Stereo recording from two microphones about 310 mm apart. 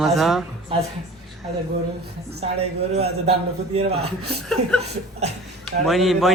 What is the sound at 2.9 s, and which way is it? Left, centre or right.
A man's voice, centre.